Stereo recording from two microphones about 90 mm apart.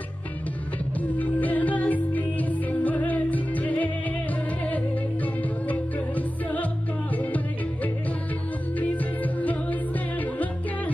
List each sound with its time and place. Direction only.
1.1 s music: 15° left (ahead or behind)